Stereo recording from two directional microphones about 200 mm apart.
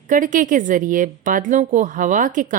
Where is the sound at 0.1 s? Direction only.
40° right (ahead or behind).